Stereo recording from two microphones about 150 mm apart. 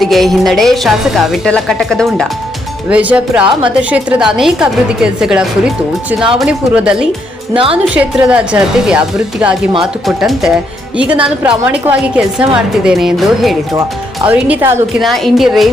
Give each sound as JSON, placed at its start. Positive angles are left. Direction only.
{"t": 0.0, "sound": "a woman's voice", "side_deg": 0}
{"t": 2.9, "sound": "a woman's voice", "side_deg": -10}
{"t": 7.5, "sound": "a woman's voice", "side_deg": -35}
{"t": 7.9, "sound": "a woman's voice", "side_deg": -10}